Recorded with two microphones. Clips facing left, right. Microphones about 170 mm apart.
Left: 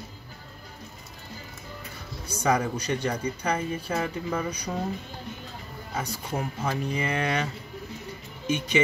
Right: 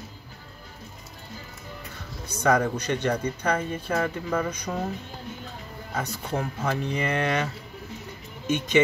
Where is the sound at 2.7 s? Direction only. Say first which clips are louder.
Right 2 dB; 10° left (ahead or behind).